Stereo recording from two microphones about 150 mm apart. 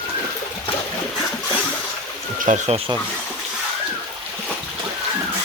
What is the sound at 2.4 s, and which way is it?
Speech, 55° right (ahead or behind).